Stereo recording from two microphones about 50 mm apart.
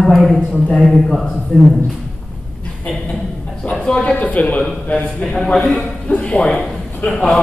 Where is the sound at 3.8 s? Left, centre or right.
Left.